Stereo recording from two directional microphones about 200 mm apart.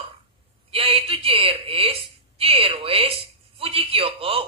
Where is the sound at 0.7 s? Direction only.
30° right (ahead or behind).